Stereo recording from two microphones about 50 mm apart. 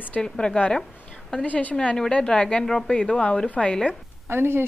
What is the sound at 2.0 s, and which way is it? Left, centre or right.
Speech, centre.